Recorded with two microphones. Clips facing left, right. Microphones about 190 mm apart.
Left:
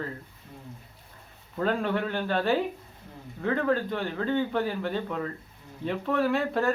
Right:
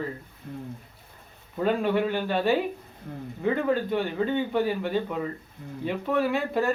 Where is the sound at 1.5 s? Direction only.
5° right (ahead or behind).